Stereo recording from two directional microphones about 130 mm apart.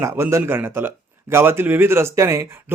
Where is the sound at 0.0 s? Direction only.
20° right (ahead or behind).